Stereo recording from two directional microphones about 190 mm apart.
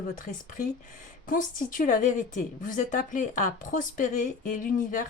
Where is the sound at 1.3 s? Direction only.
45° left (ahead or behind).